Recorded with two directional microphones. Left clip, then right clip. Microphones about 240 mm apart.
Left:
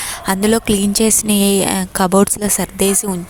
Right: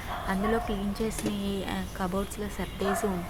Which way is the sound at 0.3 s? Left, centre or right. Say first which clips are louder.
Left 14 dB; left.